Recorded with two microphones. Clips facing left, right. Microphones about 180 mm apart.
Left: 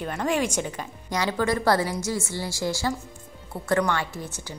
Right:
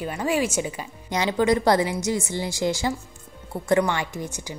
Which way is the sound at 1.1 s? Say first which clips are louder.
Right 4 dB; 20° right (ahead or behind).